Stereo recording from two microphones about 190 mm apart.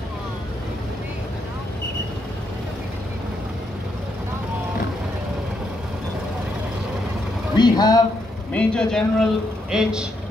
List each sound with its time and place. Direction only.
7.5 s speech: 20° left (ahead or behind)
8.5 s a man's voice: 5° left (ahead or behind)